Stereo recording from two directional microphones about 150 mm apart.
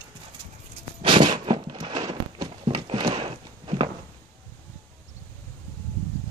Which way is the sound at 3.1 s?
40° right (ahead or behind).